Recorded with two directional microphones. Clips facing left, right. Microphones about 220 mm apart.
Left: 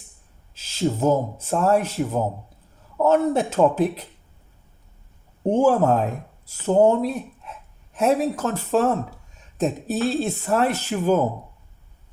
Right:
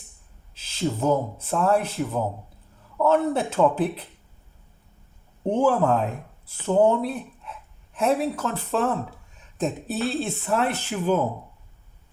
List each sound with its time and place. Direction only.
0.5 s speech: 45° left (ahead or behind)
3.0 s speech: 45° left (ahead or behind)
5.5 s speech: 45° left (ahead or behind)